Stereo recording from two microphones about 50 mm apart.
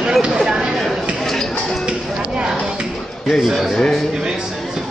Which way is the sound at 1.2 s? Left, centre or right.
Centre.